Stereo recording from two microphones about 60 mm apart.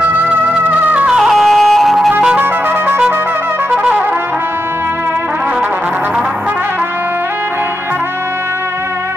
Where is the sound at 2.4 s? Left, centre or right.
Right.